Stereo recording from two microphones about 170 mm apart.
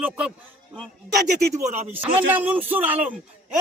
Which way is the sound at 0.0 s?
5° right (ahead or behind).